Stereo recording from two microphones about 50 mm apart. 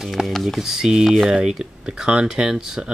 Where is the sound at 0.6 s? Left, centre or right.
Centre.